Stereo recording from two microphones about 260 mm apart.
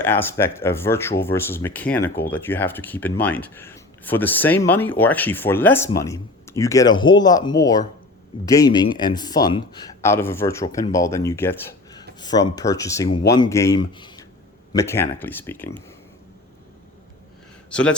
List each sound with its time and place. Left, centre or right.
0.0 s speech: centre
17.7 s speech: centre